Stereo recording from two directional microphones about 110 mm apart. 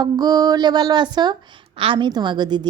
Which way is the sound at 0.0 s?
35° right (ahead or behind).